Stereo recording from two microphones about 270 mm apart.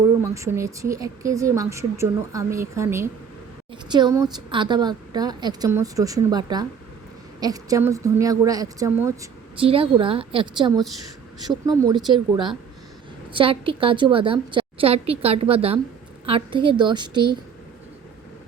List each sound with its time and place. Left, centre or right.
0.2 s a woman's voice: centre